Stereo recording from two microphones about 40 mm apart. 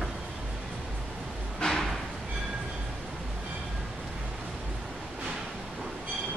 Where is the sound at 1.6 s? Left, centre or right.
Left.